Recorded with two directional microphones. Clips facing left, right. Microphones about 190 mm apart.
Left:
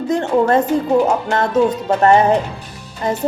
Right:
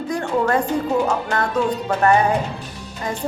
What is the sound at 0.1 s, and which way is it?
A woman's voice, 25° left (ahead or behind).